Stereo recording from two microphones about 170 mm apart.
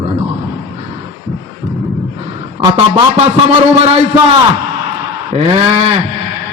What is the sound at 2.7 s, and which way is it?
Speech, 35° right (ahead or behind).